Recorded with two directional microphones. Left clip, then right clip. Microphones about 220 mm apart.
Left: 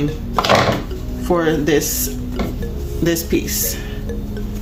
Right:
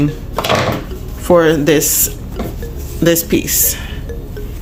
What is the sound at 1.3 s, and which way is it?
Speech, 35° right (ahead or behind).